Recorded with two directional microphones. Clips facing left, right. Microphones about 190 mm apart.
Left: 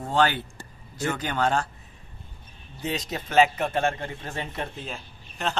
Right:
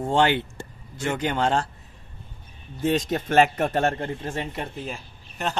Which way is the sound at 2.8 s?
50° right (ahead or behind).